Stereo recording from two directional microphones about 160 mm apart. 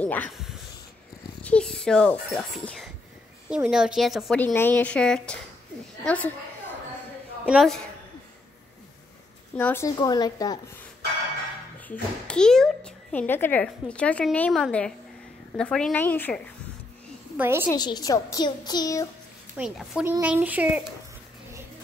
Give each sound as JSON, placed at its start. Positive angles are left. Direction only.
{"t": 0.0, "sound": "speech", "side_deg": 10}
{"t": 1.4, "sound": "speech", "side_deg": 5}
{"t": 4.4, "sound": "a child's voice", "side_deg": 10}
{"t": 7.4, "sound": "speech", "side_deg": 0}
{"t": 9.6, "sound": "a child's voice", "side_deg": 15}
{"t": 11.9, "sound": "a child's voice", "side_deg": 5}
{"t": 17.4, "sound": "speech", "side_deg": -15}
{"t": 17.6, "sound": "a child's voice", "side_deg": 25}
{"t": 19.5, "sound": "speech", "side_deg": -5}